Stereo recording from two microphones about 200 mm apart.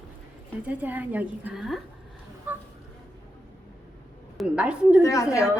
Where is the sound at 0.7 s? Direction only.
10° right (ahead or behind).